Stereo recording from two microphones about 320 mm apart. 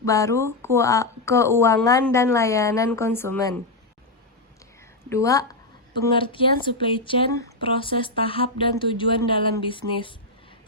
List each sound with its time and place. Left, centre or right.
0.0 s speech: centre
5.0 s a woman's voice: centre
5.9 s speech: right
6.1 s speech: centre